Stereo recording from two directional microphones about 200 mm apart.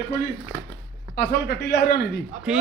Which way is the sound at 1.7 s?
55° left (ahead or behind).